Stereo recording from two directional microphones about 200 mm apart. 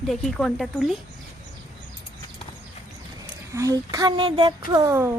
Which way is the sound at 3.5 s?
15° right (ahead or behind).